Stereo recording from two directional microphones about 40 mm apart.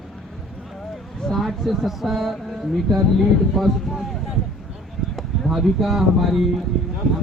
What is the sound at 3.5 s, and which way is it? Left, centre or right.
Speech, centre.